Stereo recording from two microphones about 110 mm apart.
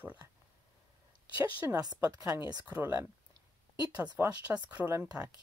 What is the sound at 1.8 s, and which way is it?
Speech, 35° right (ahead or behind).